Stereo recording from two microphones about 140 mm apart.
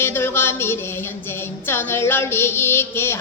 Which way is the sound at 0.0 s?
15° left (ahead or behind).